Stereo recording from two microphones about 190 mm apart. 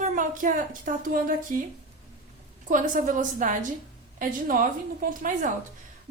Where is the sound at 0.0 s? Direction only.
45° right (ahead or behind).